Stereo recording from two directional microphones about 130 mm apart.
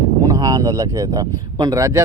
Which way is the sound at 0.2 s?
25° right (ahead or behind).